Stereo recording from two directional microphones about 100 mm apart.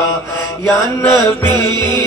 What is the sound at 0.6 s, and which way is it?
Music, 15° left (ahead or behind).